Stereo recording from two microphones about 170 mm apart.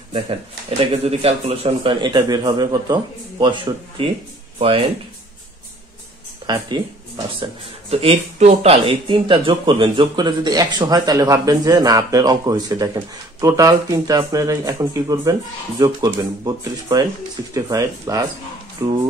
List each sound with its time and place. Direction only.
0.1 s speech: 30° right (ahead or behind)
6.4 s speech: 25° right (ahead or behind)
7.9 s speech: 35° right (ahead or behind)